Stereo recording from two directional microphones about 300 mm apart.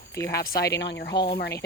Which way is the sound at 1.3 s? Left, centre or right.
Left.